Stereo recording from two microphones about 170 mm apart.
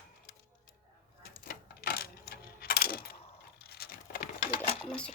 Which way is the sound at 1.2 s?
60° left (ahead or behind).